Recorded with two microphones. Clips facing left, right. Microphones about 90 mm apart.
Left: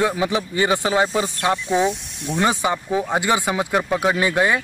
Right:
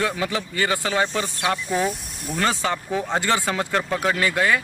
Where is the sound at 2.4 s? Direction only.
15° left (ahead or behind).